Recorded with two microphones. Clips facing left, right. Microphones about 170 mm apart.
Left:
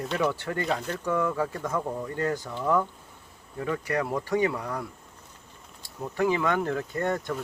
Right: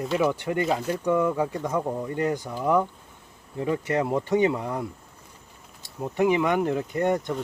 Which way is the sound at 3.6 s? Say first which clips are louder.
Right 3 dB; 20° right (ahead or behind).